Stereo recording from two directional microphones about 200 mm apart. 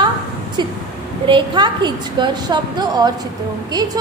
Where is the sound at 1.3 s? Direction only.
25° right (ahead or behind).